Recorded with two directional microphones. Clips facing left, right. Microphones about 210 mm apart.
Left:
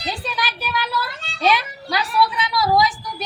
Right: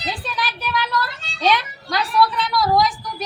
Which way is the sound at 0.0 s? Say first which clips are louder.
Even; centre (ahead or behind).